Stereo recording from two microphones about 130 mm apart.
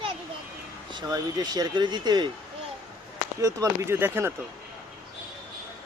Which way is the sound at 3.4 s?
25° right (ahead or behind).